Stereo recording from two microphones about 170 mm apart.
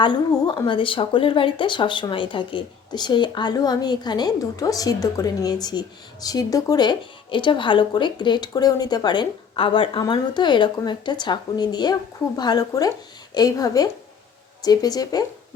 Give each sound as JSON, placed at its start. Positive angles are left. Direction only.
{"t": 0.0, "sound": "speech", "side_deg": 25}